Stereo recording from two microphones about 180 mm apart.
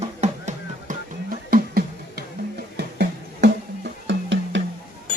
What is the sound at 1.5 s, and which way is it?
Music, 55° right (ahead or behind).